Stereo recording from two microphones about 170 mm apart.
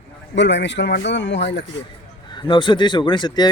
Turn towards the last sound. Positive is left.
turn(degrees=25)  # may be behind; listen again after turning